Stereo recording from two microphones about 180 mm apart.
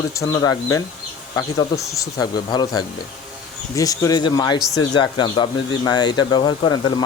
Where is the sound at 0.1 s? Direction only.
20° left (ahead or behind).